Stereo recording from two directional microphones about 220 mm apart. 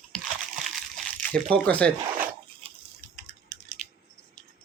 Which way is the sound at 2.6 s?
25° right (ahead or behind).